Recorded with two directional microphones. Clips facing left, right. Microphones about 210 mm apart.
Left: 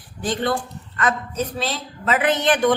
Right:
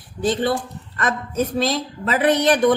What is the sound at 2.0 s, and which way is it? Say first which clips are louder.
Speech: right 2 dB; 35° right (ahead or behind).